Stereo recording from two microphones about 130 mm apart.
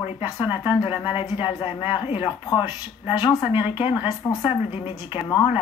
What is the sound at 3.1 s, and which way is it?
Speech, 30° left (ahead or behind).